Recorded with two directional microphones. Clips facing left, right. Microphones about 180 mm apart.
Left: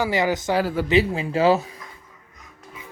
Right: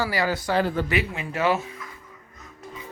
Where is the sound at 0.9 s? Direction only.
30° left (ahead or behind).